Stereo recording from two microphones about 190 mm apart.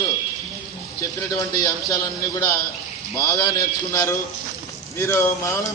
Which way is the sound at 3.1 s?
20° left (ahead or behind).